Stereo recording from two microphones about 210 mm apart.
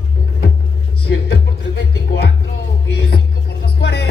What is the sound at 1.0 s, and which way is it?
Music, 50° left (ahead or behind).